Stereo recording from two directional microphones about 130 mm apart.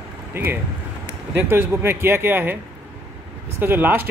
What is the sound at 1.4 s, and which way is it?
Speech, 15° right (ahead or behind).